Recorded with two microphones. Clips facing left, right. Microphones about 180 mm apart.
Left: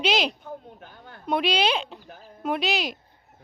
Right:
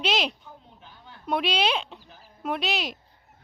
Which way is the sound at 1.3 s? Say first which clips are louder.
Left 2 dB; centre (ahead or behind).